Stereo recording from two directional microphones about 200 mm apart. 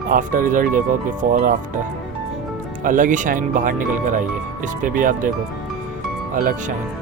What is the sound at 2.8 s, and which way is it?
Speech, 40° right (ahead or behind).